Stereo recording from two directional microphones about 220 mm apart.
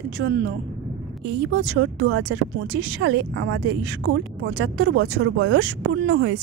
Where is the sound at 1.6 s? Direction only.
55° right (ahead or behind).